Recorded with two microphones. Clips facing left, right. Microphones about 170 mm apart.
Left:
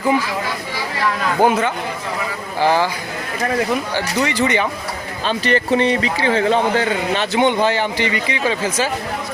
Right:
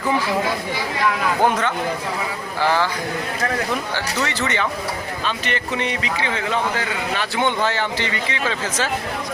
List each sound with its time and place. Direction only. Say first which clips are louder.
1.4 s speech: left 6 dB; 10° left (ahead or behind)
3.9 s speech: left 5 dB; 15° left (ahead or behind)
5.2 s speech: left 9 dB; 35° left (ahead or behind); by 8.9 s 15° left (ahead or behind)